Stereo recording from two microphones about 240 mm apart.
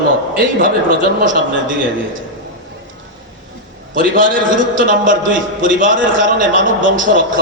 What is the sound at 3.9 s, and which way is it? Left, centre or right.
A man's voice, right.